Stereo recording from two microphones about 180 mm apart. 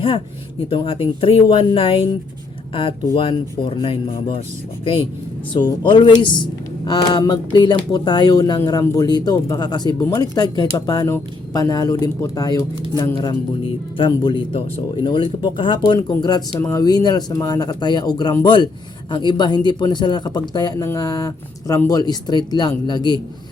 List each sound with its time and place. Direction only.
0.7 s speech: 30° left (ahead or behind)
3.2 s speech: 30° left (ahead or behind)
5.5 s speech: 25° left (ahead or behind)